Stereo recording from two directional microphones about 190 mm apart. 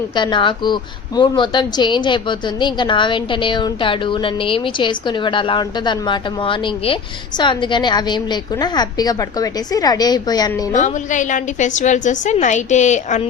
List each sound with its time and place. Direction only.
0.2 s speech: 25° left (ahead or behind)
10.7 s a woman's voice: 40° left (ahead or behind)